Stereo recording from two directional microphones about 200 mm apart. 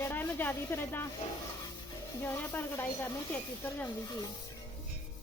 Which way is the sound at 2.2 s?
10° left (ahead or behind).